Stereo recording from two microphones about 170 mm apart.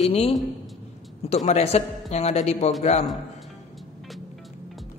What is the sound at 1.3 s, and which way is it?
A man's voice, 40° left (ahead or behind).